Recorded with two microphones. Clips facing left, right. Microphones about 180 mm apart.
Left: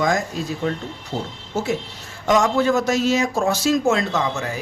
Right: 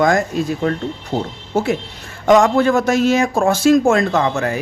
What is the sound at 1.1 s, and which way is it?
A man's voice, 65° right (ahead or behind).